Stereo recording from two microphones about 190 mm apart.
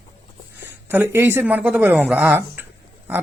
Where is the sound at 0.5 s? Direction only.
10° right (ahead or behind).